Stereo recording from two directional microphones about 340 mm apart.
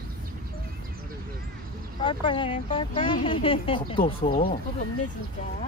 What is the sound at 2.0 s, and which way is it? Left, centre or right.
Speech, centre.